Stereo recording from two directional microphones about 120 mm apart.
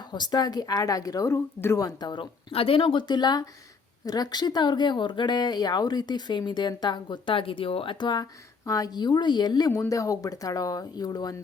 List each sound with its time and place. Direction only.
0.1 s speech: 35° left (ahead or behind)
2.5 s speech: 50° left (ahead or behind); by 11.3 s 30° left (ahead or behind)